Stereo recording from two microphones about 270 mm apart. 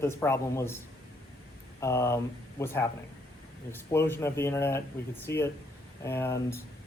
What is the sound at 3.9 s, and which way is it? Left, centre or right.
Speech, centre.